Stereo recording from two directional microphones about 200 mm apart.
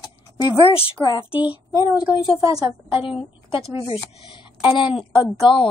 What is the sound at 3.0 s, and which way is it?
Speech, 25° left (ahead or behind).